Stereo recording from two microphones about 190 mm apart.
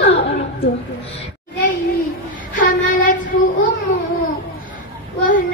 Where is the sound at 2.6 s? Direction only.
45° left (ahead or behind).